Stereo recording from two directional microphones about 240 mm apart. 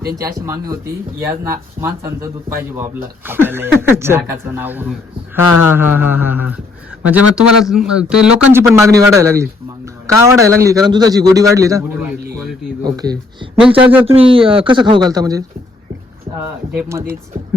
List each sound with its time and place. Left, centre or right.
0.2 s speech: centre
13.6 s speech: centre
14.1 s speech: right
16.7 s speech: centre